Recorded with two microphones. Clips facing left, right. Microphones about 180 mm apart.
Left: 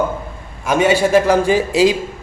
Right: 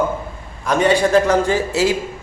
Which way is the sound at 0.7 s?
5° left (ahead or behind).